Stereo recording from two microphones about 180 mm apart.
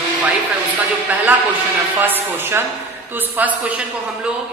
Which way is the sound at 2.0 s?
10° right (ahead or behind).